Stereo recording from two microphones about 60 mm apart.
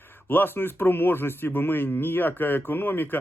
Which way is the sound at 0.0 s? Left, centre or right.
Left.